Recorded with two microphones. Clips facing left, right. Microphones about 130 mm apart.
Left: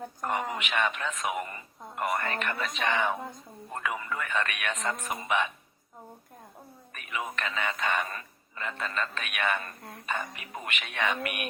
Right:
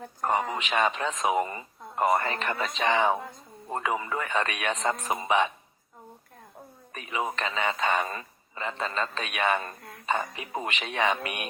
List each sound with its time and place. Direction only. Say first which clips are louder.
0.3 s a man's voice: right 4 dB; 35° right (ahead or behind)
6.9 s a man's voice: right 4 dB; 30° right (ahead or behind)